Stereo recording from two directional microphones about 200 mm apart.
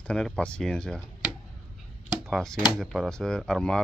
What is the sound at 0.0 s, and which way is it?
Speech, 5° left (ahead or behind).